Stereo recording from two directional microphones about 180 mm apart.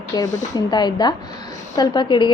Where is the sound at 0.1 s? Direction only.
20° left (ahead or behind).